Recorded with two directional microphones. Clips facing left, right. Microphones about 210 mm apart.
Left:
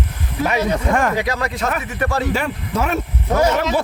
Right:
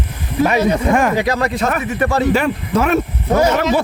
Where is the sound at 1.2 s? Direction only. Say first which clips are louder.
Right 4 dB; 35° right (ahead or behind).